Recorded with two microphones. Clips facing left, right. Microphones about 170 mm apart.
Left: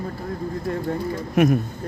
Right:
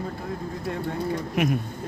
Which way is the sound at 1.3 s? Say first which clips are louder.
Left 8 dB; 45° left (ahead or behind).